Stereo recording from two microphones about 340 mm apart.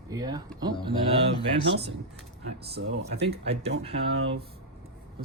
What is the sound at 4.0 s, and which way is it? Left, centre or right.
Speech, right.